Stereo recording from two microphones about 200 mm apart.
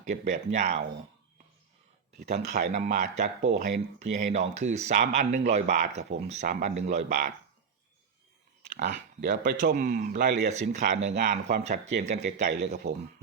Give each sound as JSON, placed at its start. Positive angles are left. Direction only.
{"t": 0.0, "sound": "speech", "side_deg": -35}
{"t": 2.7, "sound": "speech", "side_deg": -40}
{"t": 7.1, "sound": "speech", "side_deg": -50}
{"t": 8.7, "sound": "speech", "side_deg": -55}
{"t": 10.5, "sound": "speech", "side_deg": -35}